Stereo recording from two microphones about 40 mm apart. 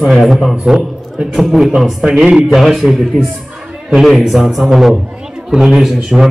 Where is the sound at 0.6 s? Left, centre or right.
Centre.